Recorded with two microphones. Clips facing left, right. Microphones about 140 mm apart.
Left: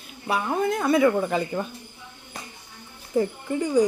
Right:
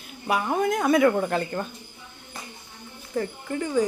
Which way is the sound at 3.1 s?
15° left (ahead or behind).